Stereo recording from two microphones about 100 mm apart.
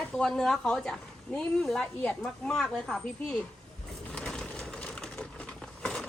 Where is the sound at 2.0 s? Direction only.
10° left (ahead or behind).